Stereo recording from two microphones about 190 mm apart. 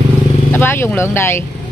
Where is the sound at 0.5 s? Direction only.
10° left (ahead or behind).